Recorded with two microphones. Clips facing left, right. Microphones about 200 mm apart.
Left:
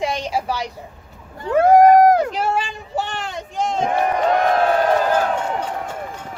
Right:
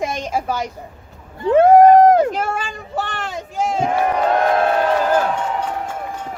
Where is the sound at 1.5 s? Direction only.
25° right (ahead or behind).